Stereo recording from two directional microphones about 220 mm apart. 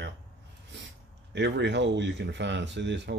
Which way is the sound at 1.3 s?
50° right (ahead or behind).